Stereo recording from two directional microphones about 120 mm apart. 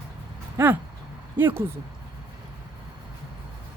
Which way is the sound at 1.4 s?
15° right (ahead or behind).